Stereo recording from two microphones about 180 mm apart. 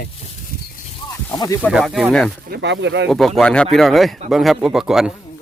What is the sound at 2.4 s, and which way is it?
Speech, 70° right (ahead or behind).